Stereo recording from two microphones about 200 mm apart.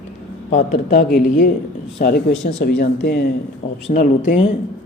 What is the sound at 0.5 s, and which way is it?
Speech, 55° left (ahead or behind).